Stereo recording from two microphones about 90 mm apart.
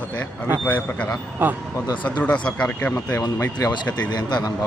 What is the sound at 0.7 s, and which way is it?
Speech, 15° left (ahead or behind).